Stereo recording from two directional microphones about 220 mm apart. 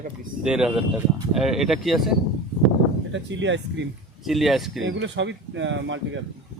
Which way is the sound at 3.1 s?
55° right (ahead or behind).